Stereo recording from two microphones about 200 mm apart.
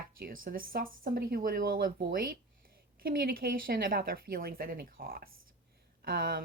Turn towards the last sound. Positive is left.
turn(degrees=-50)  # may be behind; listen again after turning